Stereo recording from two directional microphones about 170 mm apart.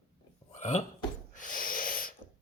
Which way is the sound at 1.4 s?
50° left (ahead or behind).